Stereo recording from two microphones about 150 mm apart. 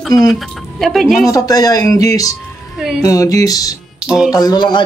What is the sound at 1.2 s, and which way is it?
Speech, 25° left (ahead or behind).